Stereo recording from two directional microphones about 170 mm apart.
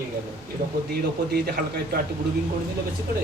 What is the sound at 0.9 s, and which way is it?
A man's voice, 70° right (ahead or behind).